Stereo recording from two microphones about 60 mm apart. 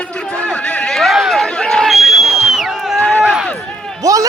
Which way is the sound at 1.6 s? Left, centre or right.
Centre.